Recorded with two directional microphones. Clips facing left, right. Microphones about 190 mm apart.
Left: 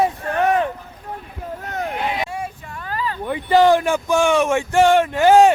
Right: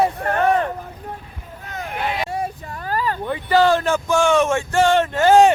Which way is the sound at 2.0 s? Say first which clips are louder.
Even; 20° left (ahead or behind).